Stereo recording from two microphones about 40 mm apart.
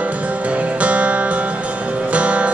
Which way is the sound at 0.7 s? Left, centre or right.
Right.